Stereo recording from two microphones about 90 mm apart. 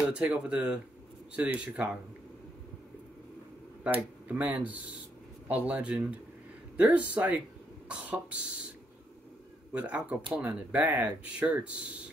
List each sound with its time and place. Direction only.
0.1 s speech: 10° right (ahead or behind)
3.8 s speech: 15° right (ahead or behind)
9.7 s speech: 15° right (ahead or behind)